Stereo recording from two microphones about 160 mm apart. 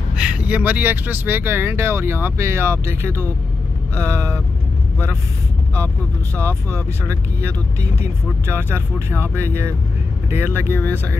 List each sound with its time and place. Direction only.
0.1 s speech: 5° right (ahead or behind)
6.4 s speech: 15° right (ahead or behind)
10.7 s speech: 10° left (ahead or behind)